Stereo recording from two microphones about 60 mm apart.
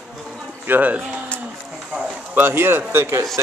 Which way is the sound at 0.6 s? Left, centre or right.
Right.